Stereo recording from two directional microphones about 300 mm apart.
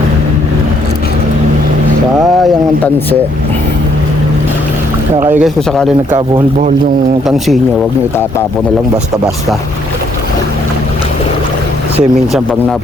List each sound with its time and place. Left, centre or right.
2.4 s a sound: centre
5.2 s speech: centre
6.1 s speech: centre
7.3 s speech: centre